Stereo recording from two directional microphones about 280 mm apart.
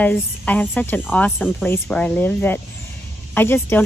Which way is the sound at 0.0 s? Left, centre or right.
Centre.